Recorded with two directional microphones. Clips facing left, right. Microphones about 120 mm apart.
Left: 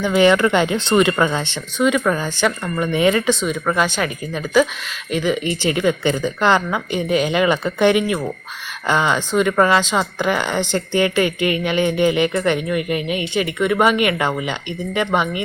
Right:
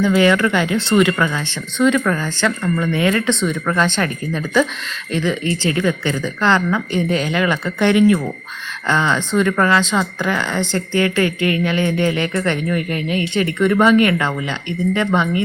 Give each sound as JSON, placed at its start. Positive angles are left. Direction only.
{"t": 0.0, "sound": "speech", "side_deg": 20}
{"t": 5.1, "sound": "speech", "side_deg": 15}